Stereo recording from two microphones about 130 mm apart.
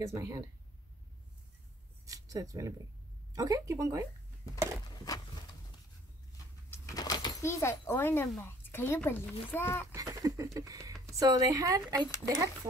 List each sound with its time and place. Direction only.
0.0 s speech: 25° right (ahead or behind)
2.0 s speech: 25° right (ahead or behind)
4.8 s a sound: 30° left (ahead or behind)
6.7 s a sound: 25° left (ahead or behind)
8.4 s speech: 15° left (ahead or behind)
9.9 s speech: 25° right (ahead or behind)